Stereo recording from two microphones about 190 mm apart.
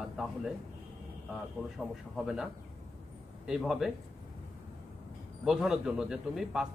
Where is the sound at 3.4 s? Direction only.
5° right (ahead or behind).